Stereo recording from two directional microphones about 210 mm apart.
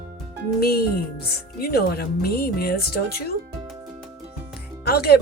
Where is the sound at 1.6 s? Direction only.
45° left (ahead or behind).